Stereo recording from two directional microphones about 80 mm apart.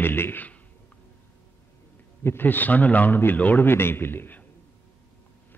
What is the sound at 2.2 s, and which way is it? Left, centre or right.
Speech, left.